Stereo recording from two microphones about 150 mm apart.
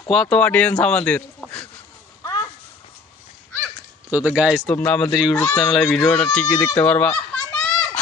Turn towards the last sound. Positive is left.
turn(degrees=5)  # may be behind; listen again after turning